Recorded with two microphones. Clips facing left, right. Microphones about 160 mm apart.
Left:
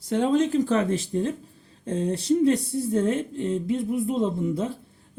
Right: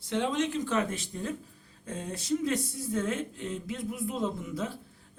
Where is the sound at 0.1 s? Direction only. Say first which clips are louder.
Left 7 dB; 40° left (ahead or behind).